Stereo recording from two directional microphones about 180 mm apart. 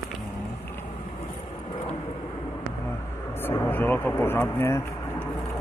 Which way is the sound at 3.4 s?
15° left (ahead or behind).